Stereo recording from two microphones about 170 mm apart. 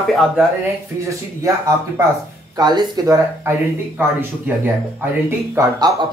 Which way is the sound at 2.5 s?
25° right (ahead or behind).